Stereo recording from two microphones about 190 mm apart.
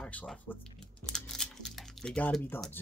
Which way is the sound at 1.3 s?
Centre (ahead or behind).